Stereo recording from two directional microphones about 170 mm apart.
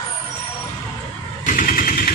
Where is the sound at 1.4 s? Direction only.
50° left (ahead or behind).